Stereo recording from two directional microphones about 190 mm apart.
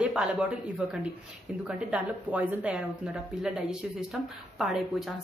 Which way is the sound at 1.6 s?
5° right (ahead or behind).